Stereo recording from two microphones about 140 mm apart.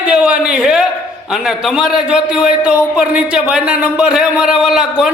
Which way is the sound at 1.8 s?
5° right (ahead or behind).